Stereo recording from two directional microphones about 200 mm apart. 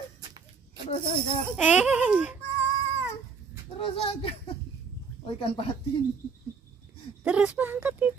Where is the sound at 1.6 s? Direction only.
5° right (ahead or behind).